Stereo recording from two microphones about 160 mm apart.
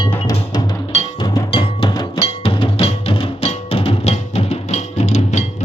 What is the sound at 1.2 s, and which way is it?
Music, 30° left (ahead or behind).